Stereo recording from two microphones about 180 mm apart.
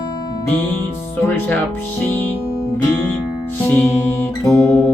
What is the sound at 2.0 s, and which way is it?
Speech, 10° left (ahead or behind).